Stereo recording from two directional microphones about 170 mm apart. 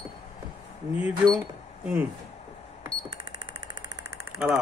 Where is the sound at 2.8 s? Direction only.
30° right (ahead or behind).